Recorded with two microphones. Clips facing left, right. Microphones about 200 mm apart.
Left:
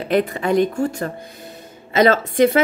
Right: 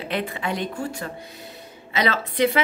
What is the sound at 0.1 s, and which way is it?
A woman's voice, 45° left (ahead or behind).